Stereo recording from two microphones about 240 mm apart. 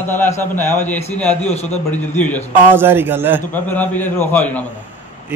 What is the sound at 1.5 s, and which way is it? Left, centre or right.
Speech, left.